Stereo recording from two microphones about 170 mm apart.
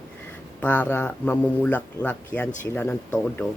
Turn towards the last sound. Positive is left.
turn(degrees=10)  # may be behind; listen again after turning